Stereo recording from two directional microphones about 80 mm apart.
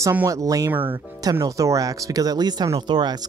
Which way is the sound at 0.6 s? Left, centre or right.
Right.